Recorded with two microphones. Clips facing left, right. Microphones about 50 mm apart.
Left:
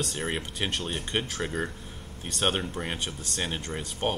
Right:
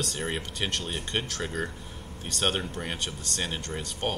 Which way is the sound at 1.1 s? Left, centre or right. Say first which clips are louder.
Left 2 dB; centre.